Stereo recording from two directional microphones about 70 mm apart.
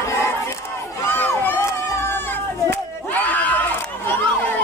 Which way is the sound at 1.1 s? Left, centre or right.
Left.